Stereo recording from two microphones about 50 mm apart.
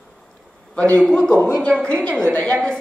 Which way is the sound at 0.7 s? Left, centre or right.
Left.